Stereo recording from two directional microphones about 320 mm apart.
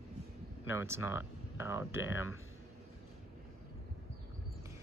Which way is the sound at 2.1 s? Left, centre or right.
Left.